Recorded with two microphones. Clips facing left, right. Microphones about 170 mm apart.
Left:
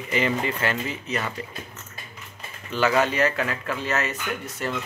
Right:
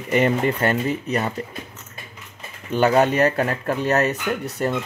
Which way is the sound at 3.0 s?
40° right (ahead or behind).